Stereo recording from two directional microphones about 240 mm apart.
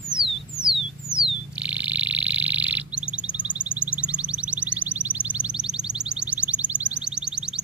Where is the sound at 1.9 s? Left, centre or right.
Centre.